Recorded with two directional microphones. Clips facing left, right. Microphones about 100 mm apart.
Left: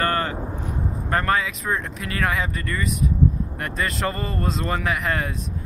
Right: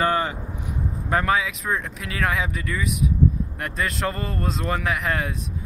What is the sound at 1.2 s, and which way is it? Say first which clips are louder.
Speech: even; centre (ahead or behind).